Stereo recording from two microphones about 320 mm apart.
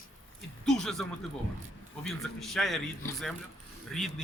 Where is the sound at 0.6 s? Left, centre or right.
Centre.